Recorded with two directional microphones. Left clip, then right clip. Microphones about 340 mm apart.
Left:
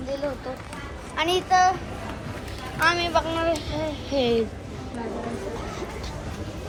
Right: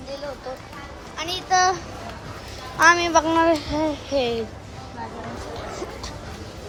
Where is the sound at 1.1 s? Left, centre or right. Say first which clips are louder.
Left 5 dB; centre.